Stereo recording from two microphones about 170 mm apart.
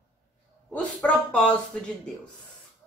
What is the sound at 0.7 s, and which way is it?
Speech, 5° left (ahead or behind).